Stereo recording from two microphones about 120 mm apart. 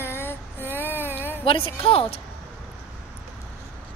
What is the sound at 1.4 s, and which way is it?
Speech, 50° left (ahead or behind).